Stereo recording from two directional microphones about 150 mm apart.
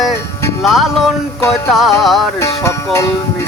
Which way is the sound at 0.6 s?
Centre (ahead or behind).